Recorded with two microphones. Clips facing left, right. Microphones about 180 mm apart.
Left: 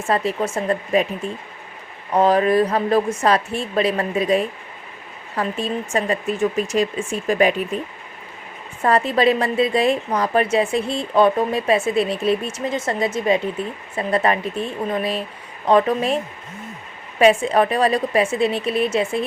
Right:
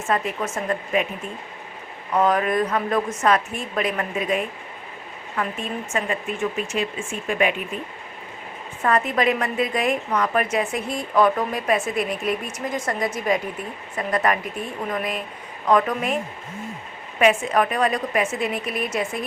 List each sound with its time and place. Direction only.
0.1 s speech: 30° left (ahead or behind)
2.1 s speech: 30° left (ahead or behind)
8.8 s a woman's voice: 30° left (ahead or behind)
17.2 s speech: 30° left (ahead or behind)